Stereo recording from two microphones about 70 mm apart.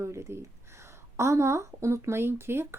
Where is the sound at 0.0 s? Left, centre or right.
Right.